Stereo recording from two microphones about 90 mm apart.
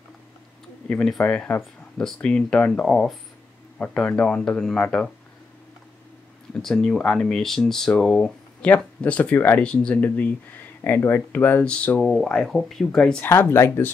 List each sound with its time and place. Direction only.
0.8 s speech: 5° left (ahead or behind)
6.6 s speech: 5° left (ahead or behind)
12.0 s speech: 5° left (ahead or behind)
13.2 s speech: 25° left (ahead or behind)